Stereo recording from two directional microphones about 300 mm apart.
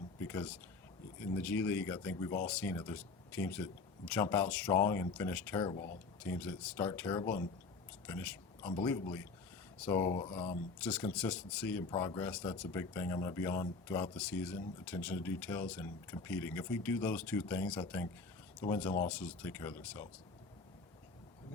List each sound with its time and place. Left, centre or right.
0.2 s a sound: centre
1.2 s speech: centre
5.7 s speech: left
6.2 s speech: centre
8.0 s a sound: centre
8.7 s speech: centre
10.8 s speech: centre